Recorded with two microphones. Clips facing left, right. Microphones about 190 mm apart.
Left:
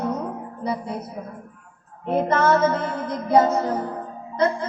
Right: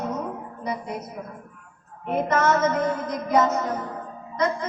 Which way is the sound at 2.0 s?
30° left (ahead or behind).